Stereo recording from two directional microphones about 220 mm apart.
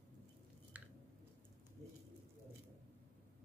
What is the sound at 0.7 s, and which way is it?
Squish, 5° right (ahead or behind).